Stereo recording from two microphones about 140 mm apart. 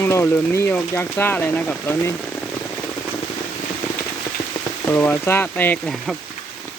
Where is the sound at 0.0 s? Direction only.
20° left (ahead or behind).